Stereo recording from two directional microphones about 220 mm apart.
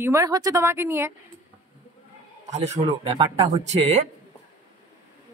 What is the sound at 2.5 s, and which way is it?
Speech, 30° right (ahead or behind).